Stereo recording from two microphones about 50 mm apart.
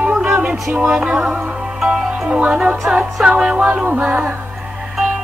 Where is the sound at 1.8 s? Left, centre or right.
Centre.